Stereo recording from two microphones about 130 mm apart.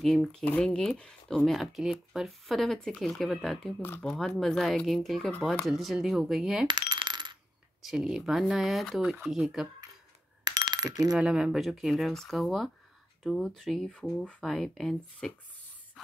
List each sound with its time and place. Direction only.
0.0 s speech: centre (ahead or behind)
6.7 s coin: 35° right (ahead or behind)
7.8 s speech: 5° right (ahead or behind)
10.4 s a sound: 30° right (ahead or behind)
11.1 s speech: 5° right (ahead or behind)